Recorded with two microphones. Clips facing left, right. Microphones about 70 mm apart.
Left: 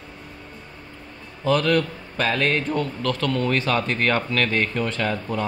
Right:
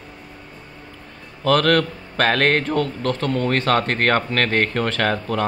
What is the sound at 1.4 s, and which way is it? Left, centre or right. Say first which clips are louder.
Speech: right 3 dB; right.